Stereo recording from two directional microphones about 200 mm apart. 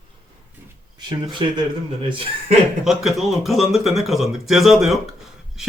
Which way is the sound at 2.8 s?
Centre (ahead or behind).